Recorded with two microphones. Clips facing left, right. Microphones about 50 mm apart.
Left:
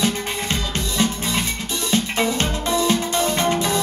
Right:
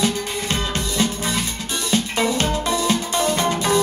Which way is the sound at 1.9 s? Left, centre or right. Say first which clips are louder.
Even; left.